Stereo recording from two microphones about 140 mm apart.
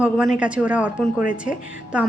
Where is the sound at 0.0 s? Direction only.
10° right (ahead or behind).